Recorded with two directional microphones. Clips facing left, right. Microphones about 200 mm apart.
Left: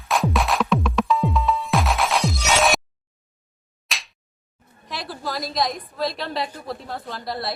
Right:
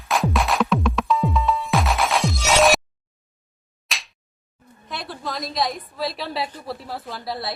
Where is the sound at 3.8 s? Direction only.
Centre (ahead or behind).